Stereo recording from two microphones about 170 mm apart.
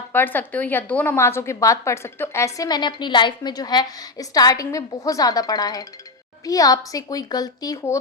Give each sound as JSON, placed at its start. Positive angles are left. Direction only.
{"t": 0.1, "sound": "a woman's voice", "side_deg": 10}